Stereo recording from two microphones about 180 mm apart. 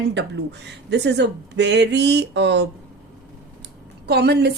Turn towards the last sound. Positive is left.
turn(degrees=-65)  # may be behind; listen again after turning